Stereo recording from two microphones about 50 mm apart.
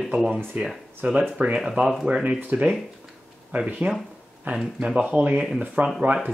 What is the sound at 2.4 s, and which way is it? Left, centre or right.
Speech, right.